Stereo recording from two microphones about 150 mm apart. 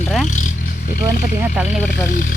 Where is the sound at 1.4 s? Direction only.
5° right (ahead or behind).